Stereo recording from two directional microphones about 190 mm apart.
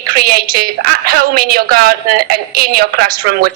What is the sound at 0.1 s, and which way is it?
A woman's voice, 50° right (ahead or behind).